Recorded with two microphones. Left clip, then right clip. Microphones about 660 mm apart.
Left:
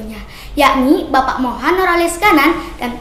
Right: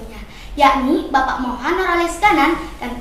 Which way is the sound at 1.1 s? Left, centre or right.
Left.